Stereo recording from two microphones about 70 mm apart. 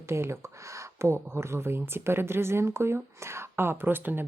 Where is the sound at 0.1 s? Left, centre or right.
Right.